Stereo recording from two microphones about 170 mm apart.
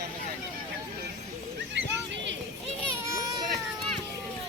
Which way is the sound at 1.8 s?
90° right.